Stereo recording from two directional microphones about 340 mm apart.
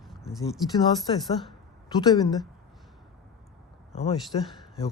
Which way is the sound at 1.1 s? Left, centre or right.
Centre.